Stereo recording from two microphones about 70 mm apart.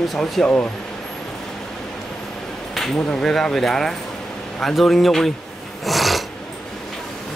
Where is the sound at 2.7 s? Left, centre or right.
Centre.